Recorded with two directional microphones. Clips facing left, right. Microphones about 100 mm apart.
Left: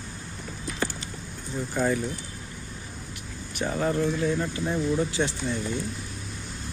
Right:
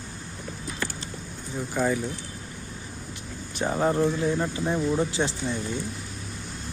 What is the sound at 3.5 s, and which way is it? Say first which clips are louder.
Speech: right 2 dB; 30° right (ahead or behind).